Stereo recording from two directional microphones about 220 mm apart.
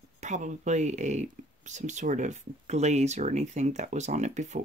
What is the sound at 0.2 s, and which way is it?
Speech, 30° right (ahead or behind).